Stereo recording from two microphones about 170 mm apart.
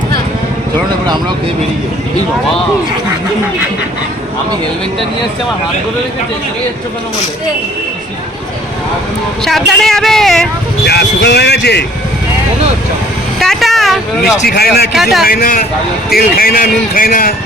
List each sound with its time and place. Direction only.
9.4 s speech: centre (ahead or behind)
10.8 s speech: 75° left (ahead or behind)
13.4 s speech: centre (ahead or behind)
14.4 s speech: 65° left (ahead or behind)
14.9 s speech: centre (ahead or behind)
15.2 s a man's voice: 60° left (ahead or behind)